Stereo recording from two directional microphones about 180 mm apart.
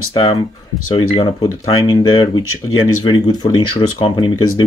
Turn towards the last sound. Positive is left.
turn(degrees=25)  # may be behind; listen again after turning